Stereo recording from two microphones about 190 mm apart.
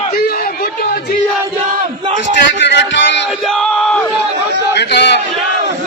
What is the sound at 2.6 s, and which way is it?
Music, 70° left (ahead or behind).